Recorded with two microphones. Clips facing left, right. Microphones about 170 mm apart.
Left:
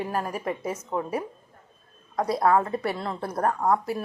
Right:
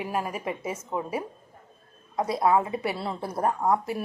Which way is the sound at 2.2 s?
5° right (ahead or behind).